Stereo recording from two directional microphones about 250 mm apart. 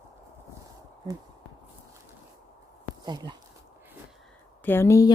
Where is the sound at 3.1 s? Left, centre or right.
Centre.